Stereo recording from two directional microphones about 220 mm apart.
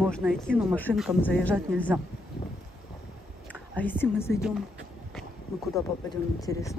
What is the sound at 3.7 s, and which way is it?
Speech, 5° left (ahead or behind).